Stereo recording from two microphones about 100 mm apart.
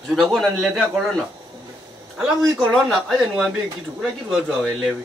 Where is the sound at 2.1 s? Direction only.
5° right (ahead or behind).